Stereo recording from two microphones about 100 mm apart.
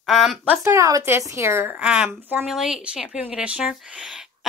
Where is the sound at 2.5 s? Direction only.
5° right (ahead or behind).